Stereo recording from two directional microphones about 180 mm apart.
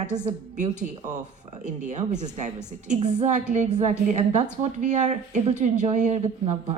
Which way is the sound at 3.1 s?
40° right (ahead or behind).